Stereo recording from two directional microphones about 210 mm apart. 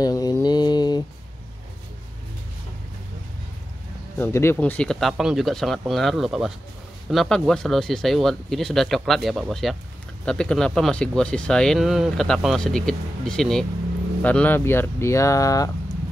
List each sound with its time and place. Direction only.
0.0 s mantra: 20° left (ahead or behind)
4.2 s speech: 10° left (ahead or behind)